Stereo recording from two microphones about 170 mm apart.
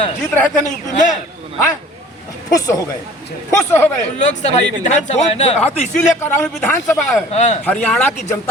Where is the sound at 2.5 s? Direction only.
20° left (ahead or behind).